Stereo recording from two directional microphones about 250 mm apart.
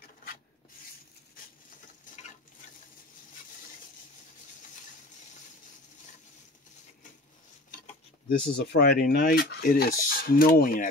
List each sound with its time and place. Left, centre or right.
8.3 s speech: left